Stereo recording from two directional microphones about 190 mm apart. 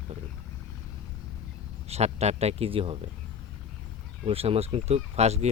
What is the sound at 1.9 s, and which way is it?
Speech, 35° right (ahead or behind).